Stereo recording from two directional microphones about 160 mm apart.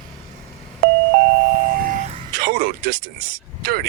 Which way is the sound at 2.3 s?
70° right (ahead or behind).